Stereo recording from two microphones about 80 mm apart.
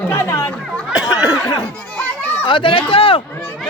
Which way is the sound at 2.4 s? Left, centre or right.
Left.